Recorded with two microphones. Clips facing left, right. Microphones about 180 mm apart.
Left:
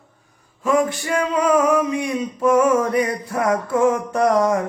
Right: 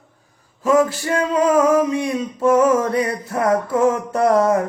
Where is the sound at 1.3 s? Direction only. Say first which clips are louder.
Right 2 dB; 25° right (ahead or behind).